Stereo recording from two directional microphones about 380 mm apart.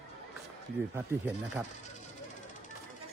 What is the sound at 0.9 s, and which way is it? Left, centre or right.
Speech, centre.